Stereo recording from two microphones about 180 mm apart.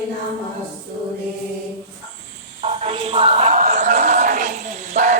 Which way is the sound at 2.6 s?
35° right (ahead or behind).